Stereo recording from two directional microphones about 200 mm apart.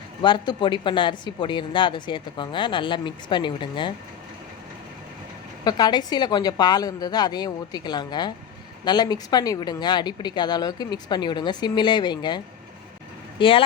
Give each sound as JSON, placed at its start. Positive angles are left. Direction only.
{"t": 0.2, "sound": "speech", "side_deg": 25}
{"t": 5.6, "sound": "speech", "side_deg": 20}
{"t": 13.4, "sound": "speech", "side_deg": 25}